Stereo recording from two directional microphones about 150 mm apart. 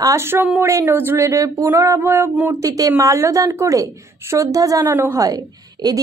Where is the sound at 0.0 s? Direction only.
20° right (ahead or behind).